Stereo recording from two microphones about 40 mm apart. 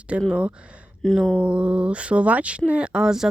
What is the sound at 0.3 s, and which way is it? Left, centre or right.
Speech, right.